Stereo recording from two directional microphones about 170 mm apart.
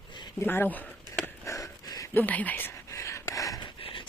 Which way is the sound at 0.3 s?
10° left (ahead or behind).